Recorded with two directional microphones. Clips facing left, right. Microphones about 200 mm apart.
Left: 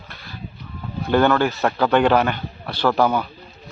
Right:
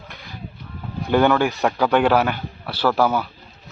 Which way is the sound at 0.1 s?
15° right (ahead or behind).